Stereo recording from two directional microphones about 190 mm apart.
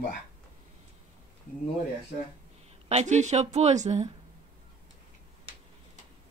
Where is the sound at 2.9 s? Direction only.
35° right (ahead or behind).